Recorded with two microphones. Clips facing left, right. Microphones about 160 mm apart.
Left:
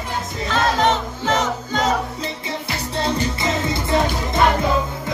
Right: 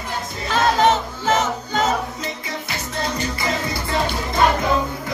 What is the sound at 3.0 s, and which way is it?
Music, 25° left (ahead or behind).